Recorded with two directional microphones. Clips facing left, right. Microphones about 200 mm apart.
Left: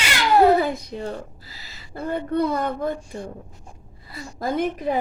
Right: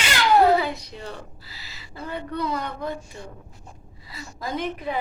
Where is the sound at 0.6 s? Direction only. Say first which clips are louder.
Left 5 dB; 50° left (ahead or behind).